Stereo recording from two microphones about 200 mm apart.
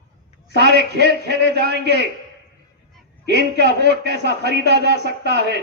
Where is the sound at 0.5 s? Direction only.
55° right (ahead or behind).